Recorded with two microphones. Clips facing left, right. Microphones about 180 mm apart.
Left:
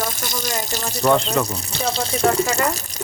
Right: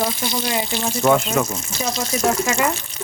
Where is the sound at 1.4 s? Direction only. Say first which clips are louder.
Left 1 dB; 35° left (ahead or behind).